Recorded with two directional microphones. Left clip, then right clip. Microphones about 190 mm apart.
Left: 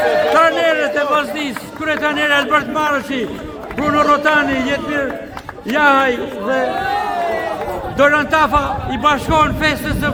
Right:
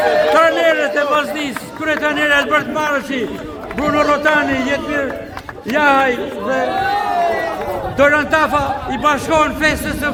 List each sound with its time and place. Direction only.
0.0 s a man's voice: centre (ahead or behind)
3.8 s a man's voice: centre (ahead or behind)